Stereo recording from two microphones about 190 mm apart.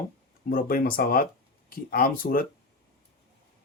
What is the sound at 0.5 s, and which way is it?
Speech, 50° left (ahead or behind).